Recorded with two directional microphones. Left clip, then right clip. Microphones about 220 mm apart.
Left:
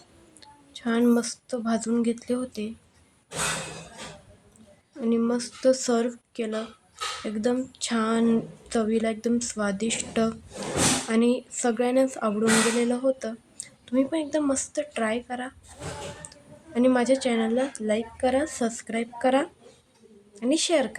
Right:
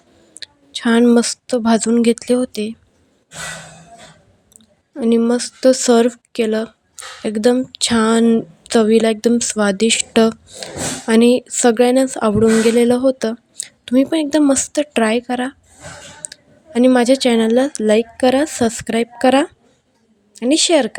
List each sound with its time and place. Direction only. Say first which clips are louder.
0.3 s speech: right 16 dB; 35° right (ahead or behind)
4.9 s a woman's voice: right 10 dB; 40° right (ahead or behind)